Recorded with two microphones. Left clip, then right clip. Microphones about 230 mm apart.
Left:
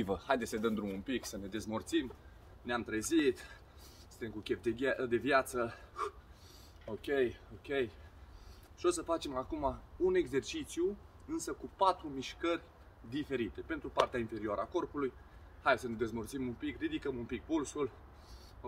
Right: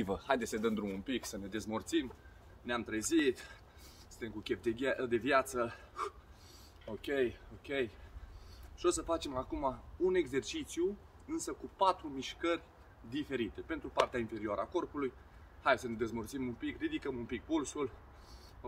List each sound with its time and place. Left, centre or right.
0.0 s a man's voice: centre